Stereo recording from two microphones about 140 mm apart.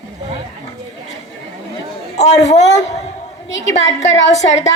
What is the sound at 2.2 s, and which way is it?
Speech, 55° left (ahead or behind).